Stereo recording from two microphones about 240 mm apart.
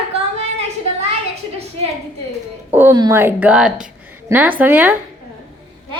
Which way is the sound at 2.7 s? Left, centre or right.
Centre.